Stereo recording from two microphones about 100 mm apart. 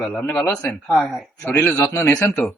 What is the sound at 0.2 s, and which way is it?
Speech, 20° left (ahead or behind).